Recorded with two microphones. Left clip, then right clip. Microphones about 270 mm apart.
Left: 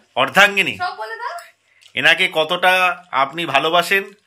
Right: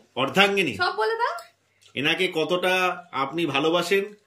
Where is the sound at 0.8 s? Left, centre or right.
Right.